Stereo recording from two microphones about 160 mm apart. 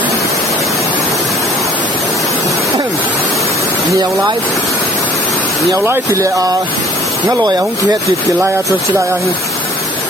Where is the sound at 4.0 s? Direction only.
25° right (ahead or behind).